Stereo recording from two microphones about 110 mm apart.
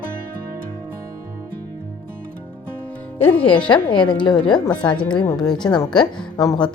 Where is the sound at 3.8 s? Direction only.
45° left (ahead or behind).